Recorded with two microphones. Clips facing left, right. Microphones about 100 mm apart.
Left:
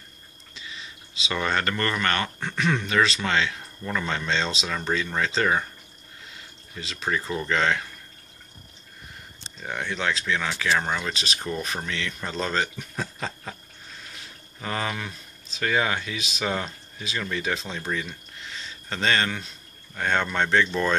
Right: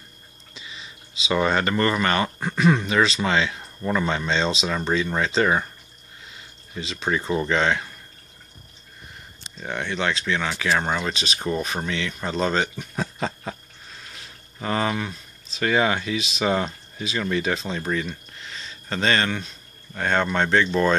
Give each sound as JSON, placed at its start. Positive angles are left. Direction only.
{"t": 1.3, "sound": "speech", "side_deg": -10}
{"t": 3.5, "sound": "a sound", "side_deg": -20}
{"t": 4.1, "sound": "speech", "side_deg": -5}
{"t": 6.8, "sound": "speech", "side_deg": 0}
{"t": 9.6, "sound": "speech", "side_deg": 0}
{"t": 10.7, "sound": "speech", "side_deg": -20}
{"t": 14.6, "sound": "speech", "side_deg": -5}